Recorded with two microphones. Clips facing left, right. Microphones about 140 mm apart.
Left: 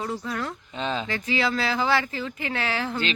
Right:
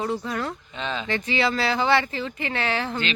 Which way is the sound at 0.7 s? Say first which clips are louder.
Left 2 dB; 35° left (ahead or behind).